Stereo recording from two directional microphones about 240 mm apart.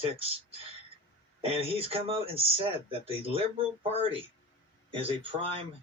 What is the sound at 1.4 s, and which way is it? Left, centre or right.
Speech, right.